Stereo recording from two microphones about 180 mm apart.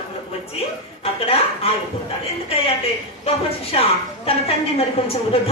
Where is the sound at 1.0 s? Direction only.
35° left (ahead or behind).